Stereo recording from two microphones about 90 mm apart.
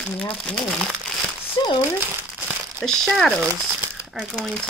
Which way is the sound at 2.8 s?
5° left (ahead or behind).